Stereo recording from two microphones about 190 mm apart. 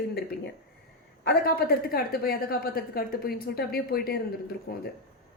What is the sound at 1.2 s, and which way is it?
A woman's voice, 55° left (ahead or behind).